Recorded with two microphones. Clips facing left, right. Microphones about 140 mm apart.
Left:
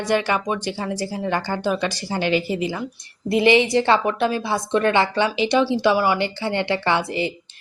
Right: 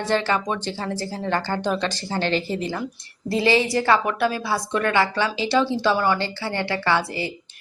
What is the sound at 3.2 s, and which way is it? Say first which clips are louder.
A woman's voice: left 3 dB; 20° left (ahead or behind).